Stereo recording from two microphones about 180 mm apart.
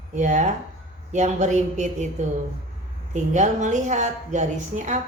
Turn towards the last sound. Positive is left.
turn(degrees=-45)  # may be behind; listen again after turning